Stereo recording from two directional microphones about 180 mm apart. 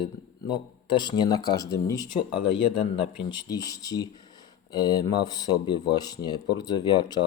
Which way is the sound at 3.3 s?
20° left (ahead or behind).